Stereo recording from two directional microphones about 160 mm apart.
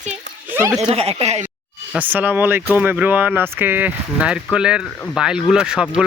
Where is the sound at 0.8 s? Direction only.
40° right (ahead or behind).